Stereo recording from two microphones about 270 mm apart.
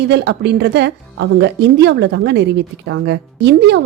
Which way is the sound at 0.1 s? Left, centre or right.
Right.